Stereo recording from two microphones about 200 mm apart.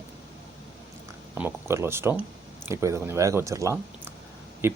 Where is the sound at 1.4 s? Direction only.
10° right (ahead or behind).